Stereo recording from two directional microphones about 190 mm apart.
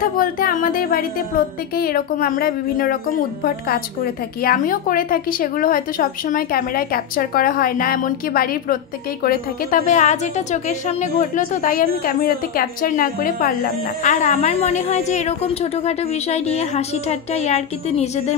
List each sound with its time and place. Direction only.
0.0 s a woman's voice: 50° left (ahead or behind)